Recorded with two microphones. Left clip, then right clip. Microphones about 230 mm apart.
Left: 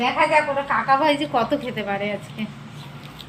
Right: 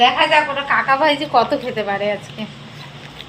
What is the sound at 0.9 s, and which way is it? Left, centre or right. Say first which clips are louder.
A woman's voice: right 3 dB; centre.